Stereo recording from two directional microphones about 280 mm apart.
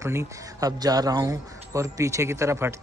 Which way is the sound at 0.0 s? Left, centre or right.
Centre.